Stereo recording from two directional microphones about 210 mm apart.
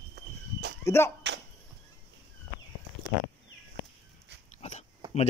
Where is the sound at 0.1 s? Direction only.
50° right (ahead or behind).